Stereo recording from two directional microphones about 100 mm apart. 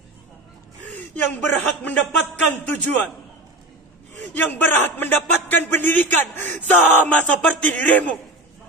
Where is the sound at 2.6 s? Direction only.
20° left (ahead or behind).